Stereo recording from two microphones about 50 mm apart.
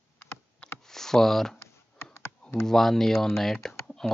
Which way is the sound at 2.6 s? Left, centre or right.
Centre.